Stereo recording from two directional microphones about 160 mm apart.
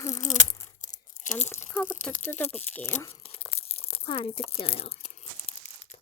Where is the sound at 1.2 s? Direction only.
50° left (ahead or behind).